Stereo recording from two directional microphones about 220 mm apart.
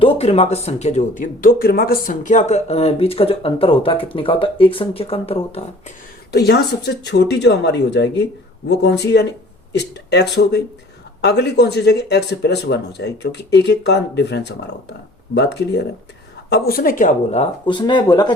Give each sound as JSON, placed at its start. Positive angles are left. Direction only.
{"t": 0.0, "sound": "speech", "side_deg": 25}
{"t": 6.3, "sound": "speech", "side_deg": 50}